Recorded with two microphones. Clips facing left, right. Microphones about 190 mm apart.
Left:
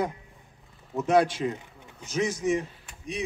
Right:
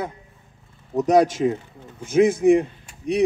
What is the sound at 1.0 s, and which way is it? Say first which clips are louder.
Speech: right 6 dB; 40° right (ahead or behind).